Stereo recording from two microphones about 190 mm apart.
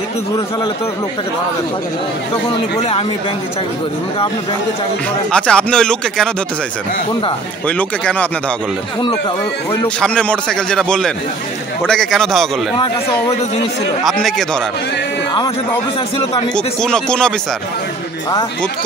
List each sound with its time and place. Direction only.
5.3 s a man's voice: 5° left (ahead or behind)
7.6 s speech: 5° left (ahead or behind)
9.7 s a man's voice: 5° left (ahead or behind)
14.0 s a man's voice: centre (ahead or behind)
16.5 s a man's voice: 5° left (ahead or behind)